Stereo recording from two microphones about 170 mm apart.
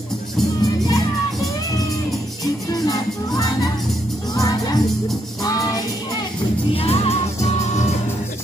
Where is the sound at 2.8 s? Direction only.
20° left (ahead or behind).